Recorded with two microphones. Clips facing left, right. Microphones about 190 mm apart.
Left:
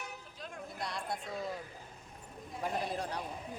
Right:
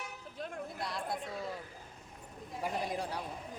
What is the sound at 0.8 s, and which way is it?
Speech, centre (ahead or behind).